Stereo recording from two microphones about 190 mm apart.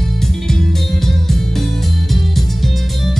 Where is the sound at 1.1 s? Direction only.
Centre (ahead or behind).